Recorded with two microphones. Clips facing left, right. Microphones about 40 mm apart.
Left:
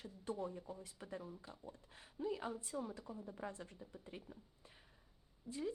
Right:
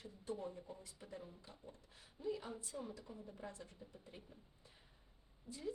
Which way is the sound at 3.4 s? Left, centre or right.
Left.